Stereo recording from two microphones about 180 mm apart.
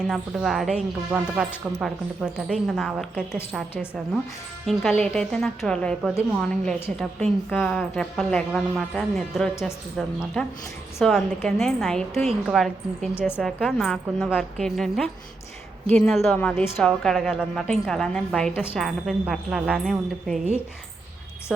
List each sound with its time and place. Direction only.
0.1 s a woman's voice: centre (ahead or behind)
4.6 s a woman's voice: centre (ahead or behind)
11.0 s a woman's voice: centre (ahead or behind)
12.1 s a woman's voice: 35° right (ahead or behind)
12.5 s a woman's voice: centre (ahead or behind)
13.1 s a woman's voice: 10° left (ahead or behind)
13.4 s a woman's voice: centre (ahead or behind)